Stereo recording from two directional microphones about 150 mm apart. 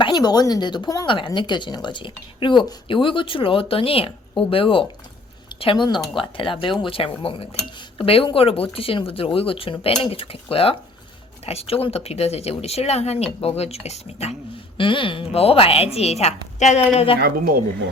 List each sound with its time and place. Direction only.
0.0 s speech: 30° left (ahead or behind); by 14.3 s 45° left (ahead or behind)
14.8 s speech: 35° left (ahead or behind)
17.2 s speech: 85° right